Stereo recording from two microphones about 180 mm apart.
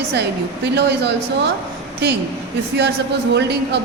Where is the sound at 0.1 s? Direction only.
70° right (ahead or behind).